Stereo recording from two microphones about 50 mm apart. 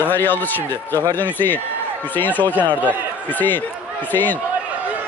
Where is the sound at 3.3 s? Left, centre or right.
Left.